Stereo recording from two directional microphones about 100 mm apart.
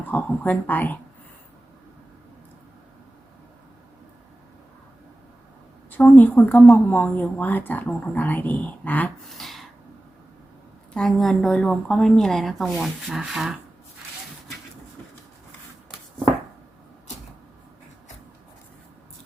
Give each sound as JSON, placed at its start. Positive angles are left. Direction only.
{"t": 0.0, "sound": "speech", "side_deg": 20}
{"t": 6.0, "sound": "speech", "side_deg": 15}
{"t": 9.3, "sound": "a sound", "side_deg": 0}
{"t": 10.9, "sound": "a woman's voice", "side_deg": 5}